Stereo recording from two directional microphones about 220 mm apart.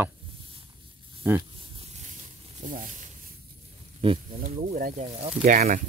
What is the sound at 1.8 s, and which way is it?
Snake, 30° right (ahead or behind).